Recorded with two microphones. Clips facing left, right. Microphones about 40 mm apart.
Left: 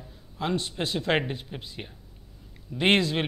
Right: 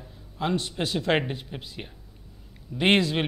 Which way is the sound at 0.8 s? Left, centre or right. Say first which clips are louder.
Right 1 dB; left.